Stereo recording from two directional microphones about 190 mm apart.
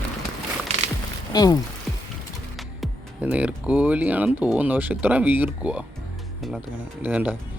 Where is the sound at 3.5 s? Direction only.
5° right (ahead or behind).